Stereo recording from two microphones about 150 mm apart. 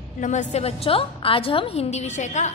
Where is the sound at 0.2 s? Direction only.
50° left (ahead or behind).